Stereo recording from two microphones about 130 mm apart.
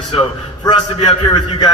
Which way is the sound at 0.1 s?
45° left (ahead or behind).